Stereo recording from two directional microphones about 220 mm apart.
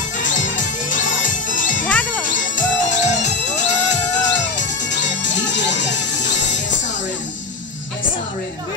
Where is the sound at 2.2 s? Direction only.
35° left (ahead or behind).